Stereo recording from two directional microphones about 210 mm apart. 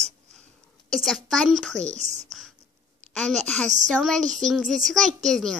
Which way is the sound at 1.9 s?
35° right (ahead or behind).